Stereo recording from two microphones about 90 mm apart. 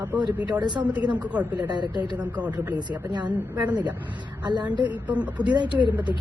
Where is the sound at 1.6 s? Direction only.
55° right (ahead or behind).